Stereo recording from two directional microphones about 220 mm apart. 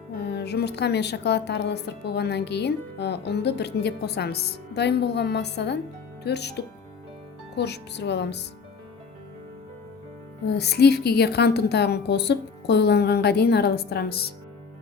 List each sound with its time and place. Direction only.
0.2 s a woman's voice: 50° left (ahead or behind)
10.6 s a woman's voice: 50° left (ahead or behind)